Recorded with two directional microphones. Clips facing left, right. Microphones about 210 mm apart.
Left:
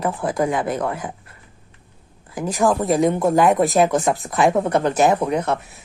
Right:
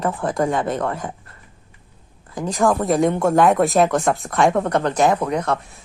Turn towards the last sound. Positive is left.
turn(degrees=10)  # may be behind; listen again after turning